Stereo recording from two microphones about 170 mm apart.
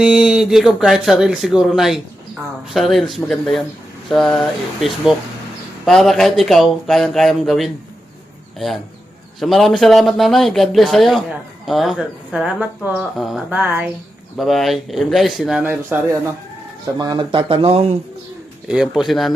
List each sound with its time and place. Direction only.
0.0 s speech: 5° right (ahead or behind)
14.3 s speech: centre (ahead or behind)
17.0 s speech: 25° right (ahead or behind)
18.7 s speech: 5° right (ahead or behind)